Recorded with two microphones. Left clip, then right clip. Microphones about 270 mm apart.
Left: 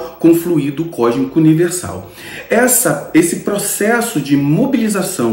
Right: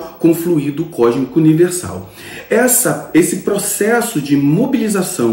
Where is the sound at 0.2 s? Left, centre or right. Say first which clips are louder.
Left 2 dB; centre.